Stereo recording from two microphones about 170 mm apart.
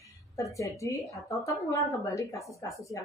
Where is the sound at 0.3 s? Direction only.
20° left (ahead or behind).